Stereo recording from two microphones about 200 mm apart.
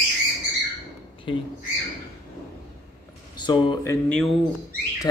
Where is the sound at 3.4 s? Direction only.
20° left (ahead or behind).